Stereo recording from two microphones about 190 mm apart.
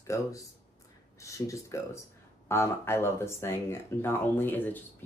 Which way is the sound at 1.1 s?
15° left (ahead or behind).